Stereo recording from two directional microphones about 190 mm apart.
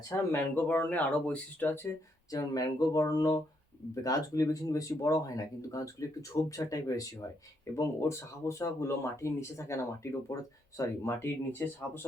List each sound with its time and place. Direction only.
0.3 s speech: 10° left (ahead or behind)